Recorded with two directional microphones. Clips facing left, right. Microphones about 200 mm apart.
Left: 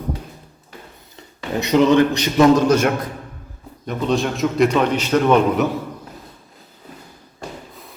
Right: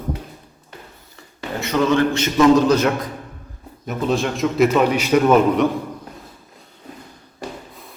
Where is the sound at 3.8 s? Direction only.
5° right (ahead or behind).